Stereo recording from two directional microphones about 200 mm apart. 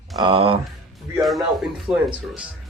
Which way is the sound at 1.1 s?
Centre (ahead or behind).